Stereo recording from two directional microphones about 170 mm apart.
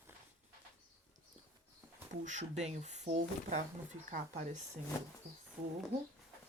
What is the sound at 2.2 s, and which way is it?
Speech, 45° right (ahead or behind).